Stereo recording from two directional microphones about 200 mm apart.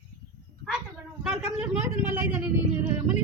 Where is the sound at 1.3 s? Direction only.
5° right (ahead or behind).